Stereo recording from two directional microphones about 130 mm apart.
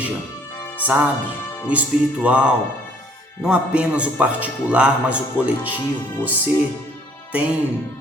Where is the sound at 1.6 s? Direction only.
10° right (ahead or behind).